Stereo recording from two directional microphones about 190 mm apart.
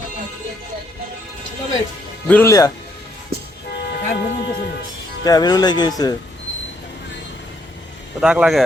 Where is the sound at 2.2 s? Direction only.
10° left (ahead or behind).